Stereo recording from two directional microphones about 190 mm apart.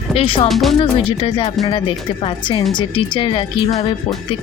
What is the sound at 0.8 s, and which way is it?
Speech, 30° left (ahead or behind).